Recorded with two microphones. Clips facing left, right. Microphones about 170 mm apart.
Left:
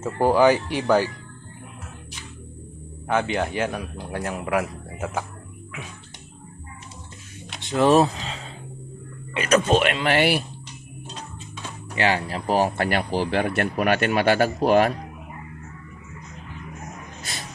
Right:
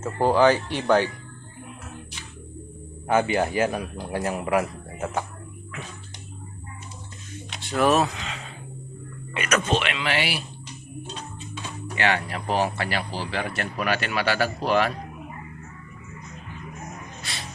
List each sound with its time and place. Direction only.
0.0 s speech: 10° left (ahead or behind)
3.1 s speech: 5° right (ahead or behind)
7.6 s a sound: 20° left (ahead or behind)
9.3 s speech: 30° left (ahead or behind)
9.8 s speech: 45° left (ahead or behind)
11.9 s speech: 30° left (ahead or behind); by 14.9 s 45° left (ahead or behind)